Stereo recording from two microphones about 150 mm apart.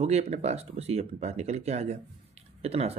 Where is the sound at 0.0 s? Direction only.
45° right (ahead or behind).